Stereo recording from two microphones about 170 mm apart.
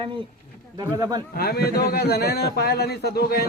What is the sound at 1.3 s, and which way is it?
A man's voice, 65° left (ahead or behind).